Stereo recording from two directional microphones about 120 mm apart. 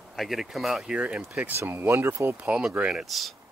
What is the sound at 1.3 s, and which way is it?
Speech, 20° right (ahead or behind).